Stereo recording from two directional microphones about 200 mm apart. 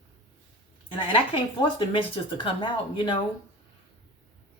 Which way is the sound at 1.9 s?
25° left (ahead or behind).